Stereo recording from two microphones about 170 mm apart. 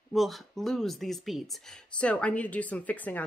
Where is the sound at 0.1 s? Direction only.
Centre (ahead or behind).